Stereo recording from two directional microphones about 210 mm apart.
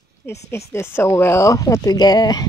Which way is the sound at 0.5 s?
15° left (ahead or behind).